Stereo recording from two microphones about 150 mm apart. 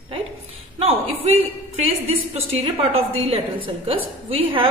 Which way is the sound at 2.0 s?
40° right (ahead or behind).